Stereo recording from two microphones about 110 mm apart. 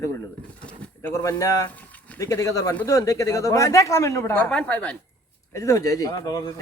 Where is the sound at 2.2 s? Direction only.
30° left (ahead or behind).